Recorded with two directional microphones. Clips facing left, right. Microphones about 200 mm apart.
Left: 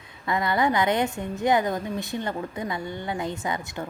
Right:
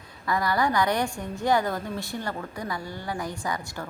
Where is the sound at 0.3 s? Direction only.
20° left (ahead or behind).